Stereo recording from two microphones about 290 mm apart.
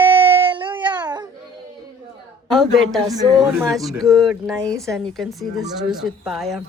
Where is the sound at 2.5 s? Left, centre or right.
Centre.